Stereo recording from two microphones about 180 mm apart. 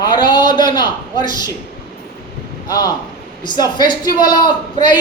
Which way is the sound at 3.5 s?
25° left (ahead or behind).